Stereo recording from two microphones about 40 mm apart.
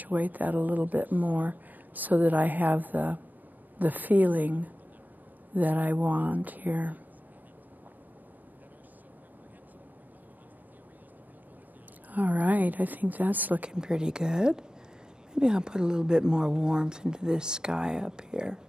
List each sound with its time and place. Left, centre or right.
0.0 s speech: right
12.1 s speech: right
13.7 s speech: right